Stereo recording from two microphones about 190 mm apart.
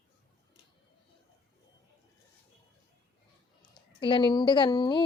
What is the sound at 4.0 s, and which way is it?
Speech, 25° left (ahead or behind).